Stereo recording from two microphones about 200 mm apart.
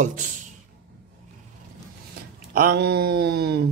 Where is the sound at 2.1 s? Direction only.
50° right (ahead or behind).